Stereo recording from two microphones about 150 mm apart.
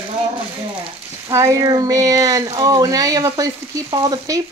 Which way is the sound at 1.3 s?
20° right (ahead or behind).